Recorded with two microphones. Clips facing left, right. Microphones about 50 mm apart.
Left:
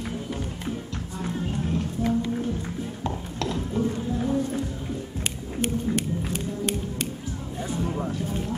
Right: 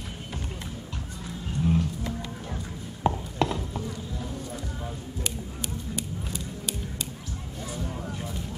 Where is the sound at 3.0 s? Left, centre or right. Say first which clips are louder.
Right 7 dB; right.